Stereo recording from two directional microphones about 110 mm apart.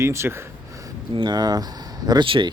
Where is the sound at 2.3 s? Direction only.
50° right (ahead or behind).